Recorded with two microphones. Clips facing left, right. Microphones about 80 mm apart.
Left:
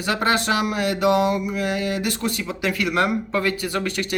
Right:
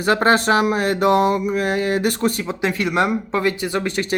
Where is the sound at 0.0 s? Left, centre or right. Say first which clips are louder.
Right 5 dB; right.